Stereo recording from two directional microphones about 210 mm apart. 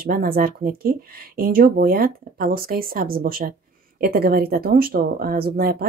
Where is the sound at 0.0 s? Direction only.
45° right (ahead or behind).